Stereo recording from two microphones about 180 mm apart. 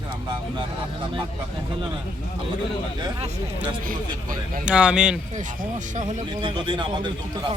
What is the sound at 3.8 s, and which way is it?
Speech, 50° right (ahead or behind).